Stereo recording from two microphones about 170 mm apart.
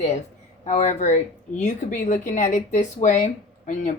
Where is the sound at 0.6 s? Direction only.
45° left (ahead or behind).